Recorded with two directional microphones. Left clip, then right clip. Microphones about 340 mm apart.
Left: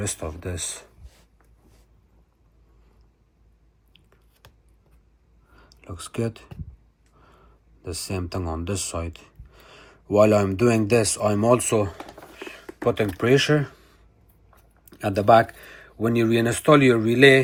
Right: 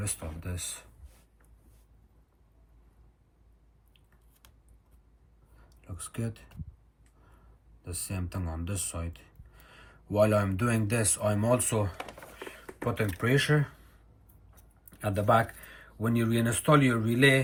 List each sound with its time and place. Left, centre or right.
0.0 s speech: centre
5.8 s speech: centre
7.9 s speech: centre
14.8 s speech: centre